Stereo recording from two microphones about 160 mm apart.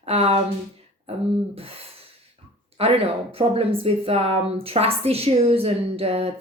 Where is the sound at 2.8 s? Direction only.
35° right (ahead or behind).